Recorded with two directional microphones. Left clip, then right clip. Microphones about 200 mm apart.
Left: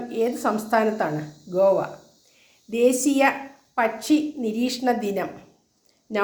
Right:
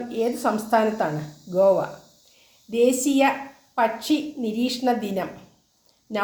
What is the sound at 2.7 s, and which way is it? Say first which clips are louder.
A woman's voice: even; 15° left (ahead or behind).